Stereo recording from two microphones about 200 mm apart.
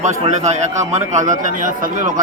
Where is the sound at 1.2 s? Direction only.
40° right (ahead or behind).